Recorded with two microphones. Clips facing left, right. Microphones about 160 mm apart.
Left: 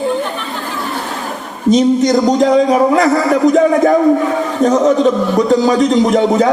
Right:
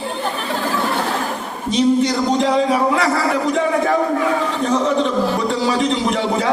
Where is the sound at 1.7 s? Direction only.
40° left (ahead or behind).